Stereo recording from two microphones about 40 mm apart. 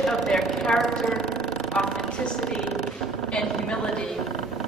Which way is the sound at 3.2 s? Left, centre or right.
Left.